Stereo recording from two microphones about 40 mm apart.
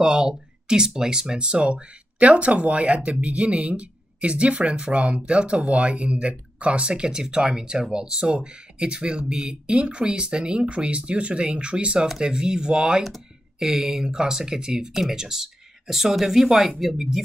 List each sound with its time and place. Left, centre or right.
0.0 s speech: centre